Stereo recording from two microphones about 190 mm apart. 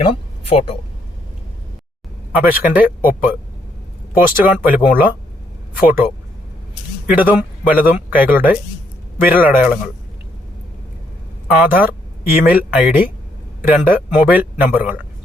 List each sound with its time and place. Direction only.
0.0 s speech: 30° left (ahead or behind)
2.3 s speech: 10° right (ahead or behind)
4.4 s speech: 10° right (ahead or behind)
7.1 s speech: 10° right (ahead or behind)
11.4 s speech: 10° right (ahead or behind)